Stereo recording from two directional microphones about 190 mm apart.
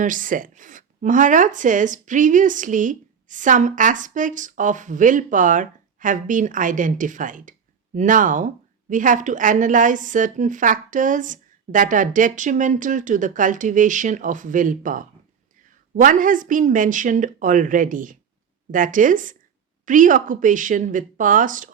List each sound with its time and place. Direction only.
0.0 s speech: 45° right (ahead or behind)